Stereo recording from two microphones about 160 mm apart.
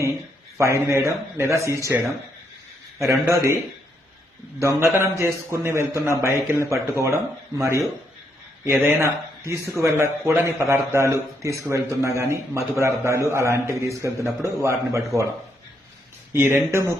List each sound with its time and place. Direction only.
0.8 s a man's voice: 20° right (ahead or behind)
4.6 s a man's voice: 15° right (ahead or behind)
8.6 s a man's voice: 15° right (ahead or behind)
16.3 s a man's voice: 15° right (ahead or behind)